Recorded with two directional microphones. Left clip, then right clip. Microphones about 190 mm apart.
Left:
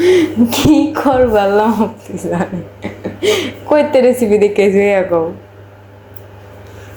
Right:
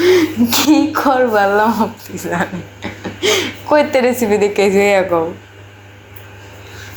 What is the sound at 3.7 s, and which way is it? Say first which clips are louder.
Speech: left 2 dB; 30° left (ahead or behind).